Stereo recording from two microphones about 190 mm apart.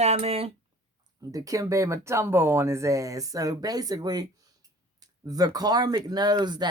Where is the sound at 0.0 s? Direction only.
35° right (ahead or behind).